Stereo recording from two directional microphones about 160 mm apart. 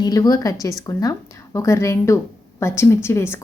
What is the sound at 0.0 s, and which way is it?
A woman's voice, 25° left (ahead or behind).